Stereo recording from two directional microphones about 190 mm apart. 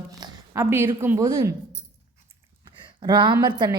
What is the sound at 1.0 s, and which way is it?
Speech, 10° right (ahead or behind).